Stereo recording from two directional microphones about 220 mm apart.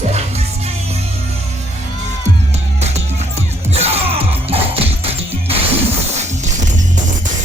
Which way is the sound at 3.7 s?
30° right (ahead or behind).